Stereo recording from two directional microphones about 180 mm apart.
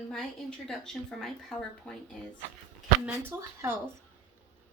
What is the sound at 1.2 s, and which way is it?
Speech, centre (ahead or behind).